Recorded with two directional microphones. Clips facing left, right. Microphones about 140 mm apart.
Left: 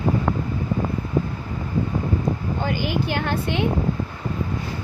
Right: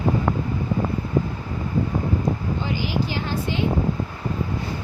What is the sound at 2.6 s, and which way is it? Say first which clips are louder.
Speech: left 3 dB; 55° left (ahead or behind).